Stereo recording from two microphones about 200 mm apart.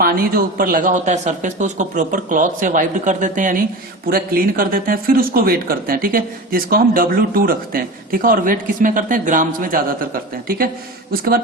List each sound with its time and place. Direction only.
0.0 s a man's voice: 45° right (ahead or behind)